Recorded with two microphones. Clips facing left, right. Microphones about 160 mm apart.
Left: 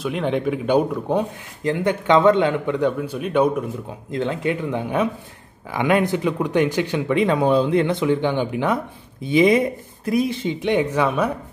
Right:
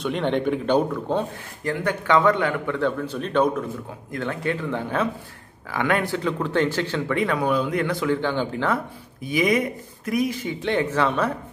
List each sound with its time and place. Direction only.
0.0 s speech: 5° left (ahead or behind)
4.1 s speech: 20° left (ahead or behind)